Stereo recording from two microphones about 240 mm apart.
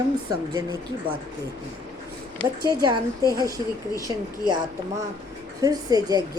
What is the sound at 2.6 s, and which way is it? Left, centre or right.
A woman's voice, centre.